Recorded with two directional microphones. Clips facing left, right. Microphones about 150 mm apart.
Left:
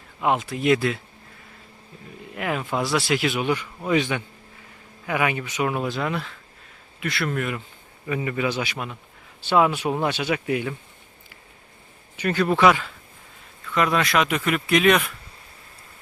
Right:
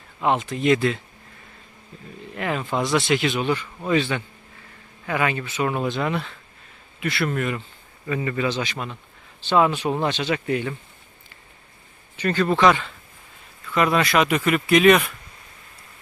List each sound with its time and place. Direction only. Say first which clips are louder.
0.2 s speech: right 1 dB; 5° left (ahead or behind)
2.3 s speech: right 1 dB; 5° left (ahead or behind)
8.0 s speech: right 1 dB; 10° left (ahead or behind)
12.1 s speech: right 1 dB; 10° left (ahead or behind)